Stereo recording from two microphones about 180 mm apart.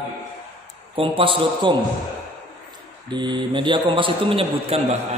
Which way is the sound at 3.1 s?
25° right (ahead or behind).